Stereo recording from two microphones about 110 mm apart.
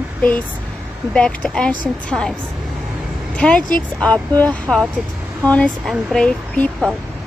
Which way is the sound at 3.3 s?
10° left (ahead or behind).